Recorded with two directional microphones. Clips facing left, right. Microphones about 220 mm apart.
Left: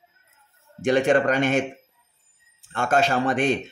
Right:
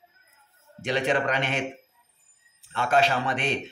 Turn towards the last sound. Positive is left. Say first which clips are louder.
# left 6 dB
turn(degrees=45)  # may be behind; listen again after turning